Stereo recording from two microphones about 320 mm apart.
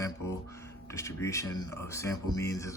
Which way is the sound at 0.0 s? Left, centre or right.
Centre.